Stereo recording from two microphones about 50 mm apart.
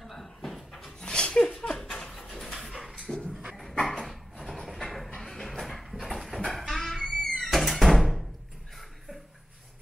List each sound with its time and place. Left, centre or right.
0.0 s cupboard open or close: centre
1.0 s a sound: centre
1.9 s dog: centre
2.1 s dog: centre
3.3 s dog: centre
3.7 s dog: centre
4.0 s dog: centre
4.8 s a sound: centre
6.5 s music: centre